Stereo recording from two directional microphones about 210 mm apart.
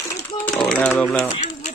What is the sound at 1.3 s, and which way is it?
Pigeon, 35° left (ahead or behind).